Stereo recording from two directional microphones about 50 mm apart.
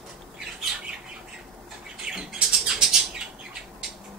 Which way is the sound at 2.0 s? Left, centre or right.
Centre.